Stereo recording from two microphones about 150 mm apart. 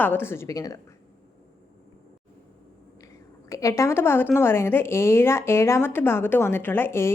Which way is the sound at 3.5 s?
20° left (ahead or behind).